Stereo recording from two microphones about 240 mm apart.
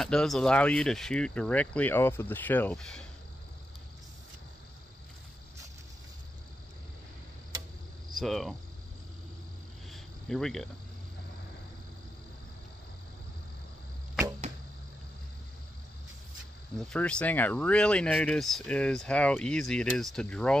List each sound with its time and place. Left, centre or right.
0.0 s speech: centre
8.2 s speech: centre
9.8 s cricket: centre
16.7 s speech: centre